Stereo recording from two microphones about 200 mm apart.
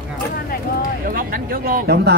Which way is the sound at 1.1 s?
45° right (ahead or behind).